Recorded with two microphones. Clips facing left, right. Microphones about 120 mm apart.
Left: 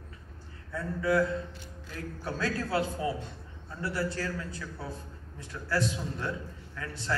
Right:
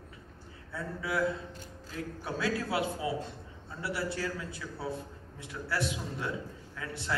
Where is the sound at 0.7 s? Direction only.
5° right (ahead or behind).